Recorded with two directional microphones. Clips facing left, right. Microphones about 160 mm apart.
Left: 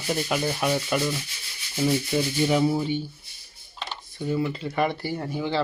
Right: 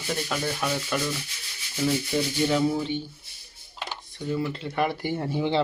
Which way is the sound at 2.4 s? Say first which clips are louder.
Left 2 dB; 10° left (ahead or behind).